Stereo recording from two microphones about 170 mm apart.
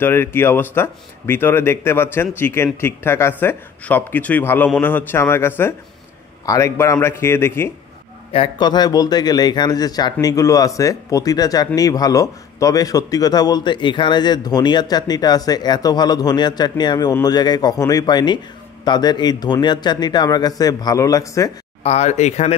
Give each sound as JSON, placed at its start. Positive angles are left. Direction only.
{"t": 0.0, "sound": "speech", "side_deg": 15}
{"t": 8.3, "sound": "speech", "side_deg": 30}
{"t": 21.8, "sound": "speech", "side_deg": 40}